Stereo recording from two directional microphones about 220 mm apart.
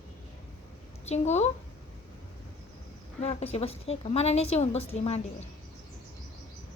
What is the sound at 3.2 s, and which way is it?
A woman's voice, 30° left (ahead or behind).